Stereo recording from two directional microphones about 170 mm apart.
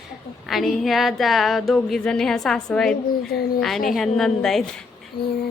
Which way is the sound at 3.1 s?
65° left (ahead or behind).